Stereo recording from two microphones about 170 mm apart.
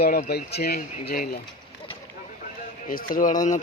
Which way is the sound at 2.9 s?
50° left (ahead or behind).